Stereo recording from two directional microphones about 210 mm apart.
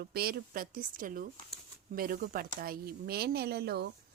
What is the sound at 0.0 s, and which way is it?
A woman's voice, 45° right (ahead or behind).